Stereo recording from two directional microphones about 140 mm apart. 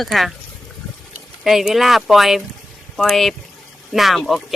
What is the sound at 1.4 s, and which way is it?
Speech, centre (ahead or behind).